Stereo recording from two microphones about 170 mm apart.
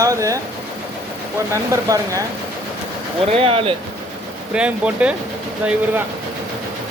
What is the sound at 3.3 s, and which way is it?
Speech, 35° right (ahead or behind).